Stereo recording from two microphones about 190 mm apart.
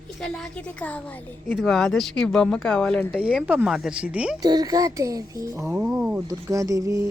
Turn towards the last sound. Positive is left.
turn(degrees=-15)  # may be behind; listen again after turning